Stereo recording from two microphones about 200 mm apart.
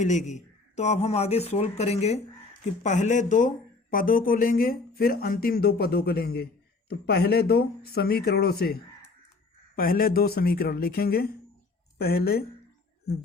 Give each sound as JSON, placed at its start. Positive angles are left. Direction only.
{"t": 0.0, "sound": "speech", "side_deg": 35}